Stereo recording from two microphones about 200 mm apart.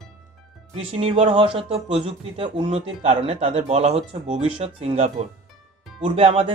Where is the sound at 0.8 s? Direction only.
30° right (ahead or behind).